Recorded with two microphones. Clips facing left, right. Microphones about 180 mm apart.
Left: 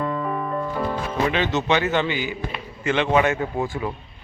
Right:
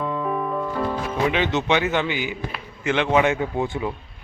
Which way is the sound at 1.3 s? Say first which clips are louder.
Even; 15° right (ahead or behind).